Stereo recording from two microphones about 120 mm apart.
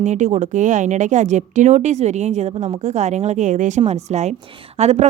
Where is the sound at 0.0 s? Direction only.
80° right.